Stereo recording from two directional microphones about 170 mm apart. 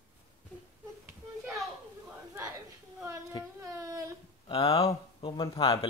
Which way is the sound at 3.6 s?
15° right (ahead or behind).